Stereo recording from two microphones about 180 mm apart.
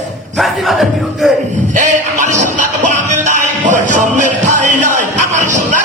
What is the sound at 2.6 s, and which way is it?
Music, 45° right (ahead or behind).